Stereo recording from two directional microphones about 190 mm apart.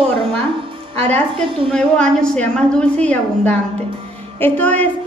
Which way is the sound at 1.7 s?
5° left (ahead or behind).